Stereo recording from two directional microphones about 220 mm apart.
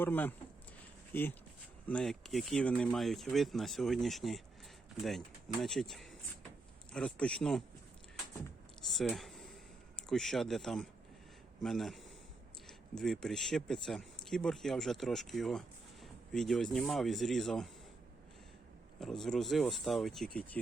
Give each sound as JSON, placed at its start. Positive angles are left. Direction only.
{"t": 0.0, "sound": "speech", "side_deg": 10}
{"t": 1.9, "sound": "speech", "side_deg": 5}
{"t": 8.9, "sound": "speech", "side_deg": 0}
{"t": 18.9, "sound": "speech", "side_deg": 0}